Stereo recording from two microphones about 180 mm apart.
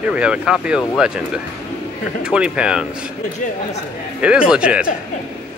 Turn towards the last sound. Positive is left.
turn(degrees=-5)  # may be behind; listen again after turning